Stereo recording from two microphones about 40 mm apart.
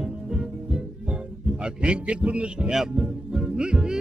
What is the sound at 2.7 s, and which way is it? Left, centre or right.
Music, centre.